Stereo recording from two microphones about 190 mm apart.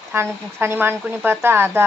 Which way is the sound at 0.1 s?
10° right (ahead or behind).